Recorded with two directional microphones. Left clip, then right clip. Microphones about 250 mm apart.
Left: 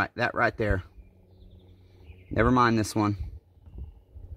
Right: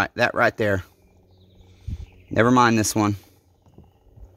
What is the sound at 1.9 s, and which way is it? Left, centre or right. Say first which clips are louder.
Speech: right 5 dB; right.